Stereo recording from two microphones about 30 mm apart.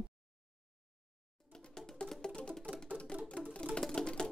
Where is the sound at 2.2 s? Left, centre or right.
Left.